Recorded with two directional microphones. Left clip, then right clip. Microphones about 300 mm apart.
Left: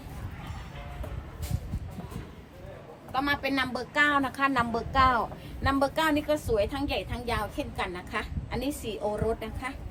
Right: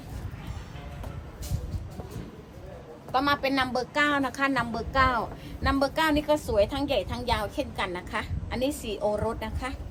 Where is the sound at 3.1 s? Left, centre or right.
Centre.